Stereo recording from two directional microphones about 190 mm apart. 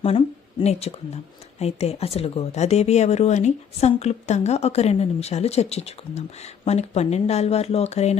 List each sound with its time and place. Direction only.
0.6 s speech: 35° left (ahead or behind)